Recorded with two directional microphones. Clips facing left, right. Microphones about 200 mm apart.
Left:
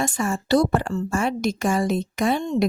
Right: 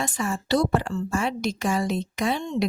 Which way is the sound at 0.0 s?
45° left (ahead or behind).